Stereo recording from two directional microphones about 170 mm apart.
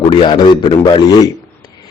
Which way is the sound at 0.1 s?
25° left (ahead or behind).